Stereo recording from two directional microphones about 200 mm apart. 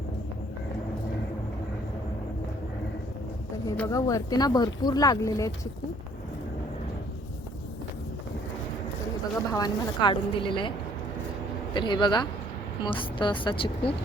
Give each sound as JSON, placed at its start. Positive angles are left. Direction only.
{"t": 3.8, "sound": "speech", "side_deg": 15}
{"t": 9.5, "sound": "a woman's voice", "side_deg": 20}
{"t": 11.7, "sound": "a woman's voice", "side_deg": 20}